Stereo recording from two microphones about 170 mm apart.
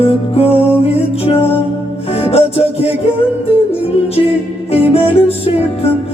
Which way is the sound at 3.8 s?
35° left (ahead or behind).